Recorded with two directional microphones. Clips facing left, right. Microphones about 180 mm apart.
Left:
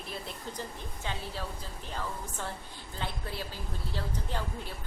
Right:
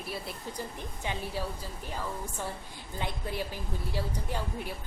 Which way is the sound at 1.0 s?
15° right (ahead or behind).